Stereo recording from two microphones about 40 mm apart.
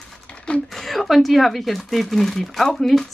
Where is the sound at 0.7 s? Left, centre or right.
Centre.